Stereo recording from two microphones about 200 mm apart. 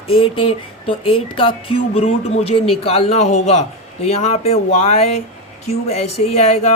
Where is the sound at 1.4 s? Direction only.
25° left (ahead or behind).